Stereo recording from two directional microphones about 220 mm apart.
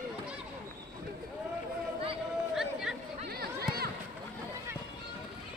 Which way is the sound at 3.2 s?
45° right (ahead or behind).